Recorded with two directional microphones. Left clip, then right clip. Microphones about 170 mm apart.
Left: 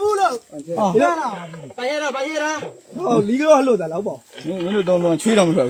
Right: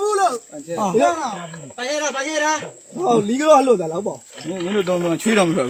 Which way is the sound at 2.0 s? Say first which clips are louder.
Right 2 dB; 25° left (ahead or behind).